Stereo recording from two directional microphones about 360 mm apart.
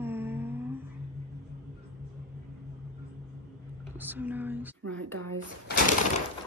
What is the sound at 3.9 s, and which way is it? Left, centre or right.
Speech, centre.